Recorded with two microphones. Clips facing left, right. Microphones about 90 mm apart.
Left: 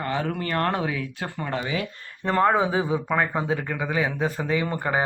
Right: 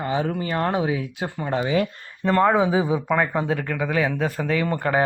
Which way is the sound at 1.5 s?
35° right (ahead or behind).